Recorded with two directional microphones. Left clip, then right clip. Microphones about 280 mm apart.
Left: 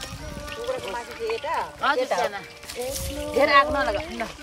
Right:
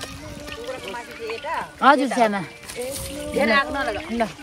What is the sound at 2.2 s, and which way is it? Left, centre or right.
Speech, centre.